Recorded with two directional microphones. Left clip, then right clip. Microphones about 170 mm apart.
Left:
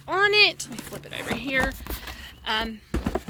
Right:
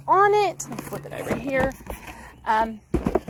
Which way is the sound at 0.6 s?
15° left (ahead or behind).